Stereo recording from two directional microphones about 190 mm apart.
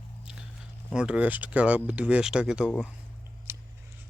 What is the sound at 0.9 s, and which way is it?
Speech, 5° right (ahead or behind).